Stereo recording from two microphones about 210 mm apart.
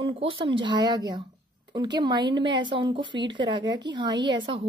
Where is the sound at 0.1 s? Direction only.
25° right (ahead or behind).